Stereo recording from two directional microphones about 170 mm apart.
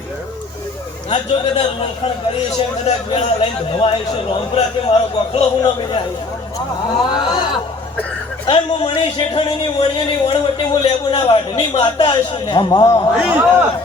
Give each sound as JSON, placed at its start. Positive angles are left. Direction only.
{"t": 1.1, "sound": "a man's voice", "side_deg": 35}
{"t": 8.4, "sound": "a man's voice", "side_deg": 30}
{"t": 13.1, "sound": "a man's voice", "side_deg": -5}